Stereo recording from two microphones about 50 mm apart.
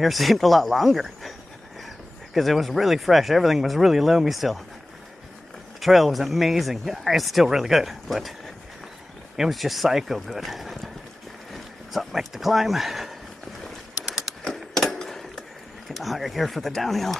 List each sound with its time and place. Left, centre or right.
0.0 s speech: centre
2.3 s speech: centre
5.8 s speech: centre
9.4 s speech: centre
14.4 s a sound: centre
15.9 s speech: centre